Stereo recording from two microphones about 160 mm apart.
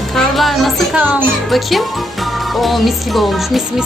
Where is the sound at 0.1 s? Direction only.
Centre (ahead or behind).